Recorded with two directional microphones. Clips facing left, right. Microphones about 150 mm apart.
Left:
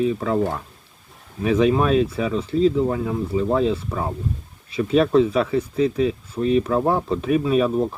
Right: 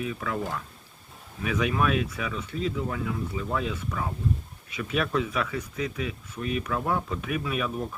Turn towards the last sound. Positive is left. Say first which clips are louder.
# left 11 dB
turn(degrees=35)  # may be behind; listen again after turning